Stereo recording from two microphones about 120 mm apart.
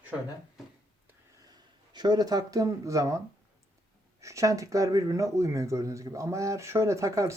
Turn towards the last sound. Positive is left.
turn(degrees=-25)  # may be behind; listen again after turning